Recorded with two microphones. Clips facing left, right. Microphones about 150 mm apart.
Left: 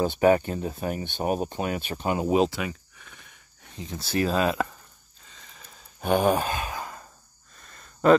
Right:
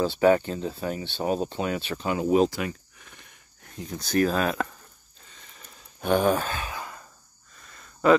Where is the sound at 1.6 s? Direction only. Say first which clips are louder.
Right 1 dB; 45° left (ahead or behind).